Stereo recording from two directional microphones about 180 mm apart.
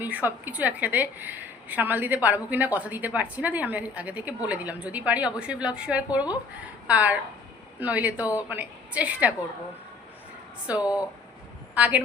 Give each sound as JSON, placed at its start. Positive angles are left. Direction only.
{"t": 0.0, "sound": "a woman's voice", "side_deg": -10}
{"t": 10.7, "sound": "a woman's voice", "side_deg": -5}